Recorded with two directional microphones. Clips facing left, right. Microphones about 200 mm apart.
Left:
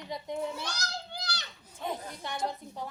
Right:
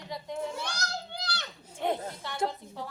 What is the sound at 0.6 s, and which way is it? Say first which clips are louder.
Children playing: right 2 dB; 60° right (ahead or behind).